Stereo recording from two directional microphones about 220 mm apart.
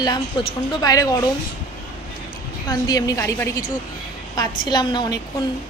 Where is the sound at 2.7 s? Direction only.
15° left (ahead or behind).